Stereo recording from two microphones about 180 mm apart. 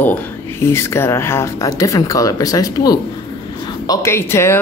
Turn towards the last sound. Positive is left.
turn(degrees=15)  # may be behind; listen again after turning